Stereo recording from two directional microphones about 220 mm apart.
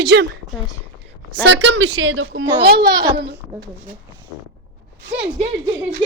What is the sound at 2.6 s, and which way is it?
Speech, 45° right (ahead or behind).